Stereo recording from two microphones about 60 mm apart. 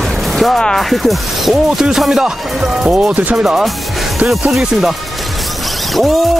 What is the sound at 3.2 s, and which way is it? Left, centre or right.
Speech, right.